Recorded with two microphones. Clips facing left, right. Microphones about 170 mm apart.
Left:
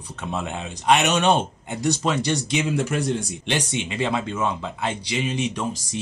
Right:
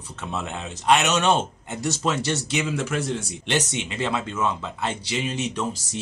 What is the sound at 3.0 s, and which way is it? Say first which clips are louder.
Speech: left 3 dB; centre (ahead or behind).